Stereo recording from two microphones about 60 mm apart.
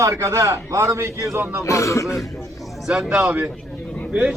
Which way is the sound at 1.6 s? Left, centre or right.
Left.